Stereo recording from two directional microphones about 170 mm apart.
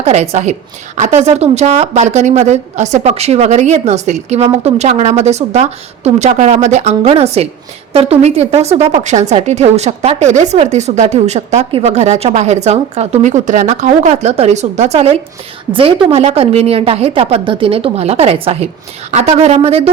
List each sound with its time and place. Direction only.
0.0 s a woman's voice: 40° right (ahead or behind)